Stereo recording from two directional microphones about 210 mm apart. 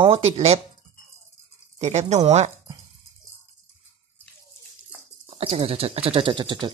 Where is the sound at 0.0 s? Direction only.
25° right (ahead or behind).